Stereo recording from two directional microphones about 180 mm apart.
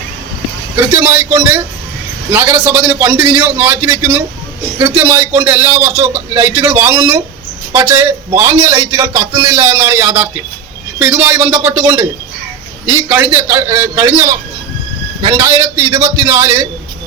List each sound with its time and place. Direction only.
0.8 s a man's voice: 10° right (ahead or behind)